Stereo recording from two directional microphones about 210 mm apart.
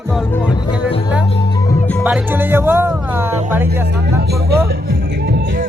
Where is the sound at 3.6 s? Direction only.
50° right (ahead or behind).